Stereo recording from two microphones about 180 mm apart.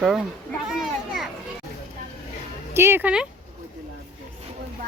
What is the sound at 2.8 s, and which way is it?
Speech, 15° right (ahead or behind).